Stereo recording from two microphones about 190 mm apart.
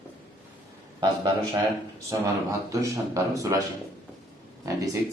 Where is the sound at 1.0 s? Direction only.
25° right (ahead or behind).